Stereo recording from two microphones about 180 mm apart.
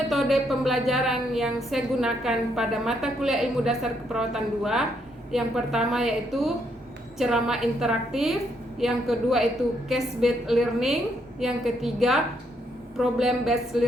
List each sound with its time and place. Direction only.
0.1 s a woman's voice: centre (ahead or behind)